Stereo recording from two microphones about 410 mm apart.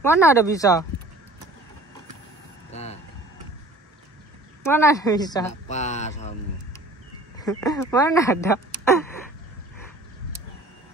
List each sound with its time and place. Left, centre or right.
0.0 s speech: centre
2.7 s vehicle: centre
4.6 s speech: centre